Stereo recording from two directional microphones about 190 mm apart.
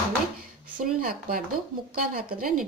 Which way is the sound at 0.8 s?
50° right (ahead or behind).